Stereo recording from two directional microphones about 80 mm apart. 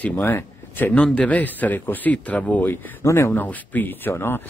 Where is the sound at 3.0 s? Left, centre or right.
Left.